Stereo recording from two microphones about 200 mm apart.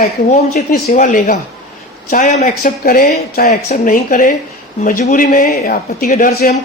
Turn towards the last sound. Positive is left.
turn(degrees=45)  # may be behind; listen again after turning